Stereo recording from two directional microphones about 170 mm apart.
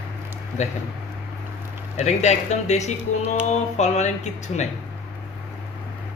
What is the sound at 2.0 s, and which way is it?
Speech, 40° left (ahead or behind).